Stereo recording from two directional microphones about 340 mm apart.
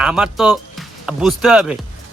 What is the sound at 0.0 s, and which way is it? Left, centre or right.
Speech, centre.